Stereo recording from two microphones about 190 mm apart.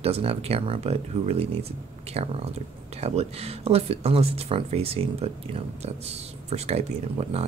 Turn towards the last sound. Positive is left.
turn(degrees=-35)  # may be behind; listen again after turning